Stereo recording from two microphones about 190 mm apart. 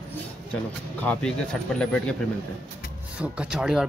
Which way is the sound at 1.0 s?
5° left (ahead or behind).